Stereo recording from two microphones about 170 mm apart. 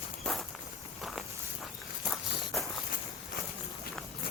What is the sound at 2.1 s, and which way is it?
Walk, centre (ahead or behind).